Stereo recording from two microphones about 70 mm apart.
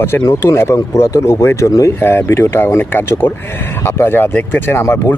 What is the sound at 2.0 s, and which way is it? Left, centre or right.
Speech, left.